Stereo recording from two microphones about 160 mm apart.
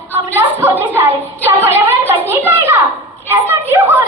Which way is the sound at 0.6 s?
15° right (ahead or behind).